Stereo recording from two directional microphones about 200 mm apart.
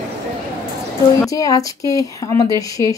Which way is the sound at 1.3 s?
15° left (ahead or behind).